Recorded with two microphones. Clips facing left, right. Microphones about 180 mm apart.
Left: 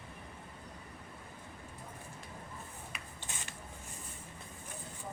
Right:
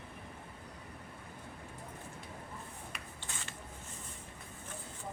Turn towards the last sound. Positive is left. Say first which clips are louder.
# even
turn(degrees=20)  # may be behind; listen again after turning